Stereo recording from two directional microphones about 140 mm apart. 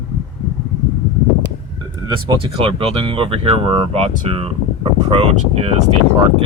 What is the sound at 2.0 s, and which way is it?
Speech, 30° right (ahead or behind).